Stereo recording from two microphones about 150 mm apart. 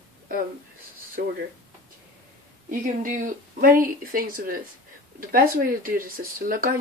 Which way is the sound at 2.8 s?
65° right (ahead or behind).